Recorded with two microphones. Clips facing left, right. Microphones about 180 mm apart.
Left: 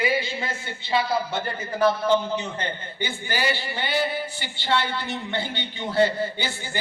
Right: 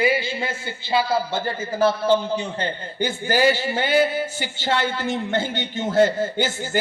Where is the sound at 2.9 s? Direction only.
45° right (ahead or behind).